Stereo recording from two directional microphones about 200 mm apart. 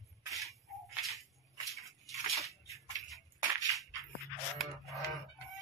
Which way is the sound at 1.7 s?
Centre (ahead or behind).